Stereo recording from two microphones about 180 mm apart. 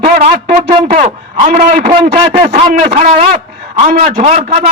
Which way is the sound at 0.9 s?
40° right (ahead or behind).